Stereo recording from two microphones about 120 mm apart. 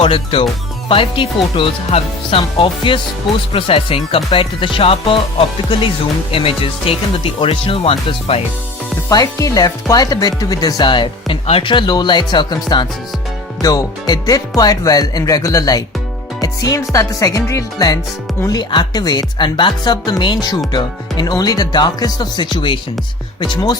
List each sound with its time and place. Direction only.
0.0 s speech: 50° left (ahead or behind)
6.3 s speech: 50° left (ahead or behind)
9.0 s speech: 30° left (ahead or behind)